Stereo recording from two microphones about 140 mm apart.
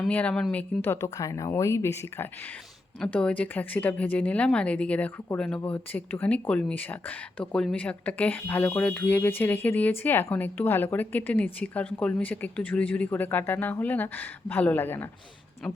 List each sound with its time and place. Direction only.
0.1 s a woman's voice: 10° left (ahead or behind)
3.0 s speech: 5° left (ahead or behind)